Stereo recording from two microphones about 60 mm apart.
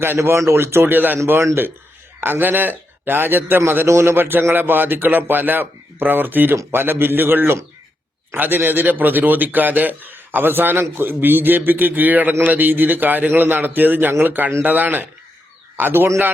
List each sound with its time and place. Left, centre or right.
0.3 s a man's voice: right
2.2 s a man's voice: right
3.6 s a man's voice: right